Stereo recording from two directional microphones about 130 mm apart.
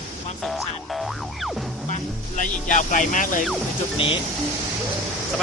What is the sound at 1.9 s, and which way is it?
Music, 65° left (ahead or behind).